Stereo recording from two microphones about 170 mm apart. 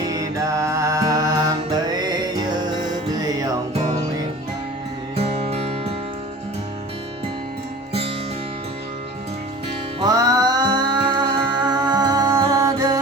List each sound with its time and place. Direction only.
0.1 s music: 20° right (ahead or behind)
5.1 s music: 35° right (ahead or behind)
10.0 s music: 20° right (ahead or behind)